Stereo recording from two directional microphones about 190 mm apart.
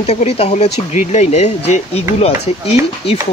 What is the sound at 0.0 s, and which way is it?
Speech, 35° left (ahead or behind).